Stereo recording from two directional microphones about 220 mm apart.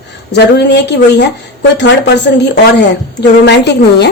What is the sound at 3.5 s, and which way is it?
Speech, 50° left (ahead or behind).